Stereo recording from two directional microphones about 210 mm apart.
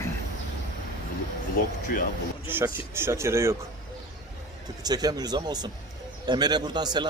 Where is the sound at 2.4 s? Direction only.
10° right (ahead or behind).